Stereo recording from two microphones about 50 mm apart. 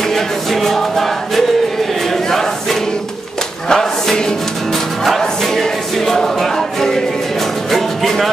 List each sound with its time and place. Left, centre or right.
0.1 s music: centre
3.6 s chant: centre
5.0 s music: centre